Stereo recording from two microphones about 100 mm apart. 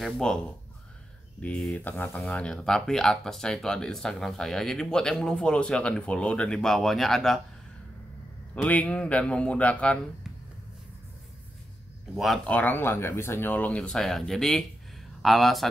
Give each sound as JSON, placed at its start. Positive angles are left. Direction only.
{"t": 0.0, "sound": "speech", "side_deg": 5}
{"t": 1.4, "sound": "speech", "side_deg": 10}
{"t": 2.3, "sound": "speech", "side_deg": 5}
{"t": 8.6, "sound": "speech", "side_deg": 15}
{"t": 12.4, "sound": "speech", "side_deg": 15}